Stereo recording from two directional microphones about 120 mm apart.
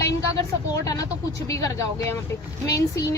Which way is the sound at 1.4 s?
30° left (ahead or behind).